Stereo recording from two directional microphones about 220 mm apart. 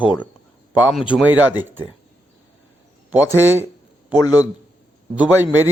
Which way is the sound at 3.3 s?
10° right (ahead or behind).